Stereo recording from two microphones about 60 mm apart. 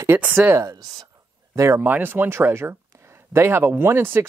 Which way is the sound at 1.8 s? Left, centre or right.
Right.